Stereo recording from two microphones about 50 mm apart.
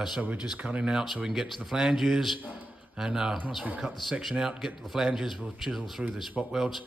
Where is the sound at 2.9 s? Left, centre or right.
Centre.